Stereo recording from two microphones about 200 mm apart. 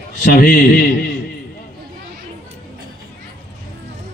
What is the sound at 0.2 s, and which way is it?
Speech, 45° left (ahead or behind).